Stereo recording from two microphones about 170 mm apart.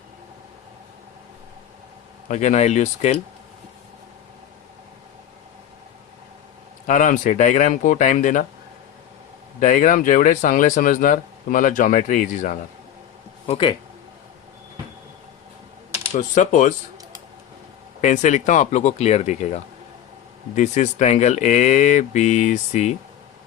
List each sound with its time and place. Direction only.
2.2 s speech: 45° left (ahead or behind)
6.8 s speech: 50° left (ahead or behind)
9.6 s speech: 50° left (ahead or behind)
13.5 s speech: 30° left (ahead or behind)
16.1 s speech: 45° left (ahead or behind)
18.0 s speech: 45° left (ahead or behind)
20.6 s speech: 45° left (ahead or behind)